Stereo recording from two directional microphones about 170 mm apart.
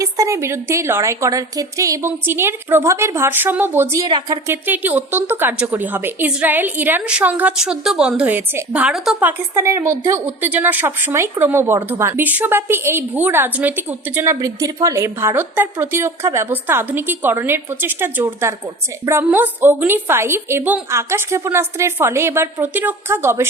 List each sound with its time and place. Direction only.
0.0 s a woman's voice: 20° right (ahead or behind)
4.5 s a woman's voice: 10° right (ahead or behind)
9.6 s a woman's voice: 15° right (ahead or behind)